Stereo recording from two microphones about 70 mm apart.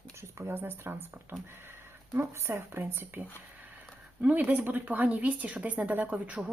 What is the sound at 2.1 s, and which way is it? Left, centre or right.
Speech, right.